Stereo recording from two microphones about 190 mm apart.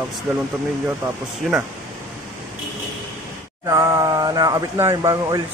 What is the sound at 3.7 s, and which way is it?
Speech, 20° right (ahead or behind).